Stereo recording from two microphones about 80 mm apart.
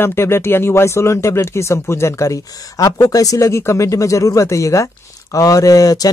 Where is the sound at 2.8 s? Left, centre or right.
Left.